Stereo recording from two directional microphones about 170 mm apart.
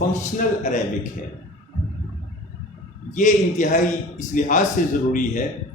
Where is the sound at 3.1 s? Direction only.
50° left (ahead or behind).